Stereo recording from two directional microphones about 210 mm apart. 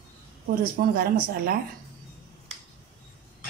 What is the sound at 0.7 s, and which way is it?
Speech, 45° right (ahead or behind).